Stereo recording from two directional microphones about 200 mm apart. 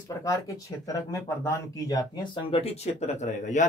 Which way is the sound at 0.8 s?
15° left (ahead or behind).